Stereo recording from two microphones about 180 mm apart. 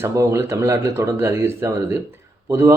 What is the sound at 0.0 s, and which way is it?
A man's voice, 15° right (ahead or behind).